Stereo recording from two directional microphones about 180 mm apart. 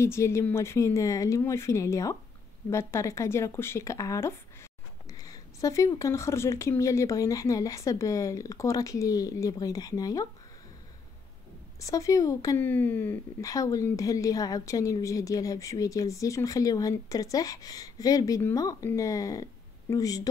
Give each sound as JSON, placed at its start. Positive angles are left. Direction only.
{"t": 0.0, "sound": "speech", "side_deg": 15}
{"t": 11.8, "sound": "speech", "side_deg": 20}